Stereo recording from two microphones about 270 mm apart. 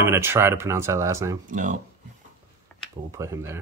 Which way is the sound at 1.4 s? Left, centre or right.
Right.